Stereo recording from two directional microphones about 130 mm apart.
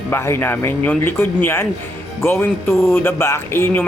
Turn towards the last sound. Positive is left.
turn(degrees=20)  # may be behind; listen again after turning